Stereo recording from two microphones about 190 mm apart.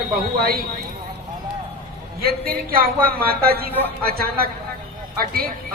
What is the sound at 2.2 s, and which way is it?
A woman's voice, 50° right (ahead or behind).